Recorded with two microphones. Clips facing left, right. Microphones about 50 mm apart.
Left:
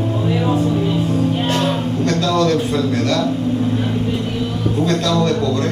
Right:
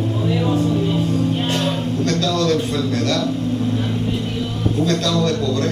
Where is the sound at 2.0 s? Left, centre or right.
Centre.